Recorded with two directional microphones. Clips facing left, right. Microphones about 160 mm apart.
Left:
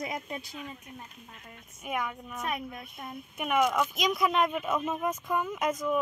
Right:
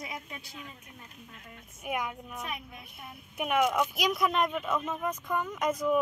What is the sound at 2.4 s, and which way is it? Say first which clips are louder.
Speech: left 10 dB; 45° left (ahead or behind).